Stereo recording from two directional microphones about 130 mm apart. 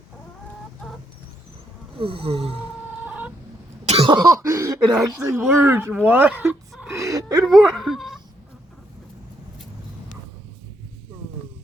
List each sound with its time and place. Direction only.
2.0 s snoring: 45° right (ahead or behind)
3.0 s chicken: 15° right (ahead or behind)
3.8 s cough: 50° right (ahead or behind)
4.1 s speech: 30° right (ahead or behind); by 6.8 s 15° right (ahead or behind)
7.0 s speech: 25° right (ahead or behind)
7.4 s speech: centre (ahead or behind)